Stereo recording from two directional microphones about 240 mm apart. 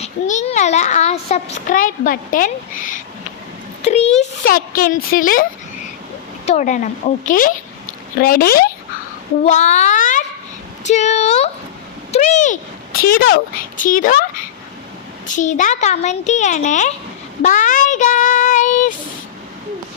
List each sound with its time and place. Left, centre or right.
0.0 s a child's voice: left
15.3 s a child's voice: left
17.4 s child singing: left